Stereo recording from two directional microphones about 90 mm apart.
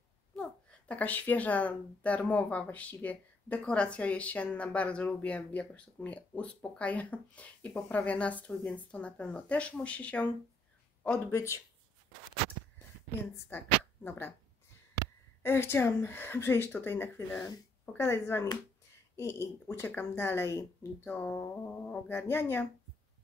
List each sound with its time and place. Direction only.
0.4 s a woman's voice: 15° left (ahead or behind)
11.3 s speech: 35° left (ahead or behind)
13.5 s speech: 25° left (ahead or behind)
15.4 s speech: 25° left (ahead or behind)